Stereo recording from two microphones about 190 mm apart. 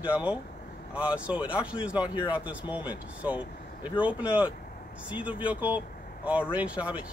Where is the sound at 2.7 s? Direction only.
10° right (ahead or behind).